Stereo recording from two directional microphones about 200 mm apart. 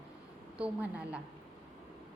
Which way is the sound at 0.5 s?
5° right (ahead or behind).